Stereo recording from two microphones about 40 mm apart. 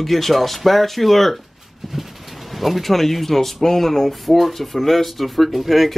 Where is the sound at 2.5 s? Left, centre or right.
Centre.